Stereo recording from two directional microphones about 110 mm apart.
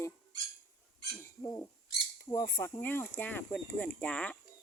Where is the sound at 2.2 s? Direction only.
30° left (ahead or behind).